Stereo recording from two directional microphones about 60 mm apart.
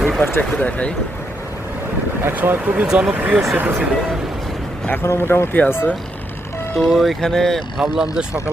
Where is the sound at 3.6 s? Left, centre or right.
Right.